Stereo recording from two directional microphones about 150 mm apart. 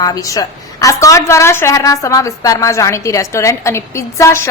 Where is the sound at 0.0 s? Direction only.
25° left (ahead or behind).